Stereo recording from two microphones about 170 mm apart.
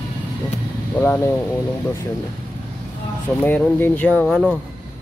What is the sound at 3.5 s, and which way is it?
Speech, 10° left (ahead or behind).